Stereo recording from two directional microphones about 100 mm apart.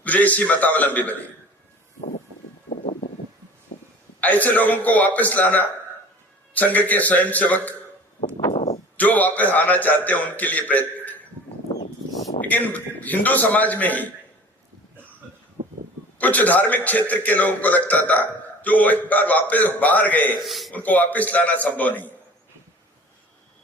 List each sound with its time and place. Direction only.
0.0 s a man's voice: 15° left (ahead or behind)
4.2 s a man's voice: 15° left (ahead or behind)
8.5 s a sound: 90° left
9.0 s a man's voice: 15° left (ahead or behind)
12.4 s a man's voice: 15° left (ahead or behind)
15.6 s a sound: 65° right (ahead or behind)
16.1 s a man's voice: 15° left (ahead or behind)
20.4 s speech: centre (ahead or behind)
20.7 s a man's voice: 15° left (ahead or behind)